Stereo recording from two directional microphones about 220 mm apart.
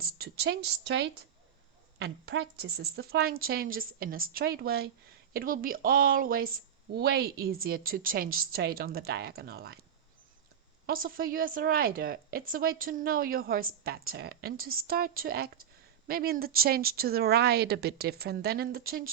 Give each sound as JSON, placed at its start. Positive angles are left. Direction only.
{"t": 0.0, "sound": "a woman's voice", "side_deg": -45}
{"t": 10.8, "sound": "a woman's voice", "side_deg": -40}